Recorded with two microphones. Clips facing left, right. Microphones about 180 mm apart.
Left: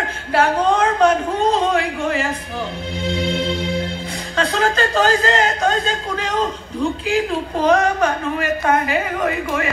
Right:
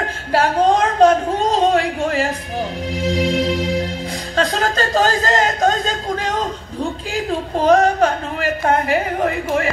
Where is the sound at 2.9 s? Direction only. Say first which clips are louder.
Right 3 dB; 40° right (ahead or behind).